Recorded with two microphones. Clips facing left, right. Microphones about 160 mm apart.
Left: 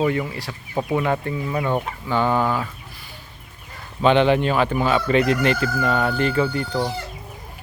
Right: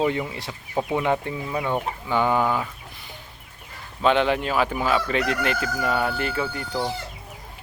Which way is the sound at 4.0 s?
Centre (ahead or behind).